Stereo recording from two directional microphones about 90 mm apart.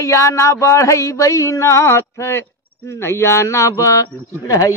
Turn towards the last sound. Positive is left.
turn(degrees=40)  # may be behind; listen again after turning